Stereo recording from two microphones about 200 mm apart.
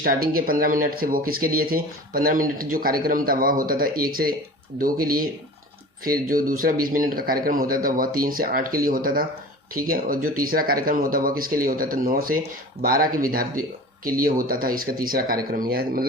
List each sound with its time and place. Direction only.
0.0 s speech: 45° right (ahead or behind)